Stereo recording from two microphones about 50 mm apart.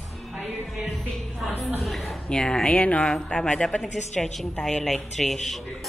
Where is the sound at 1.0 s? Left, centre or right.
Centre.